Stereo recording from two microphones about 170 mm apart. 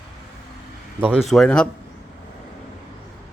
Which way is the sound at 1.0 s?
5° right (ahead or behind).